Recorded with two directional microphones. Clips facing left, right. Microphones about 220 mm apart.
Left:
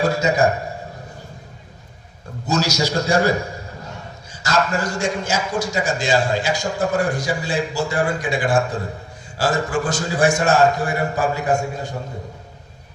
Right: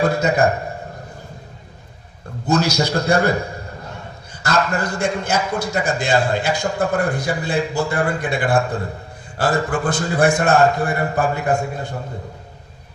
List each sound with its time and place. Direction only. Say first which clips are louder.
0.0 s a man's voice: right 1 dB; 55° right (ahead or behind)
2.5 s a man's voice: right 2 dB; 55° right (ahead or behind)